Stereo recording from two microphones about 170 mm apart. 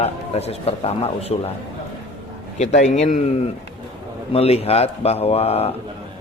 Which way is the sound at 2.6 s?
40° left (ahead or behind).